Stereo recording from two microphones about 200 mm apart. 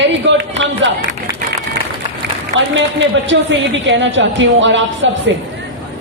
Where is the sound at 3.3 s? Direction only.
65° right (ahead or behind).